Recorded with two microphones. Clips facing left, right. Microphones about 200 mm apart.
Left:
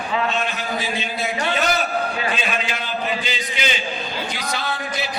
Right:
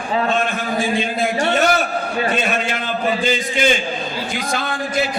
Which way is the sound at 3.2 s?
50° right (ahead or behind).